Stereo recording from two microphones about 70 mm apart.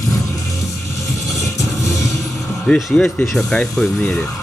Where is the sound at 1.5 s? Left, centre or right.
Left.